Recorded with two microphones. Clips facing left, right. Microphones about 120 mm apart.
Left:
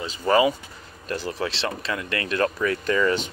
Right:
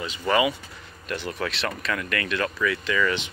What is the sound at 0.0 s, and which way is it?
Speech, 35° left (ahead or behind).